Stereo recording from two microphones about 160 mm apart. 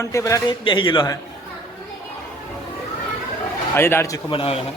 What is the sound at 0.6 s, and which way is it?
Speech, 30° left (ahead or behind).